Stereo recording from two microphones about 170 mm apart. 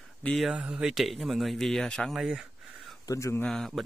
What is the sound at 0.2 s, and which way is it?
Speech, 5° left (ahead or behind).